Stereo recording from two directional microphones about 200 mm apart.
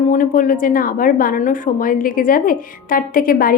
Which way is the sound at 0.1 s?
45° left (ahead or behind).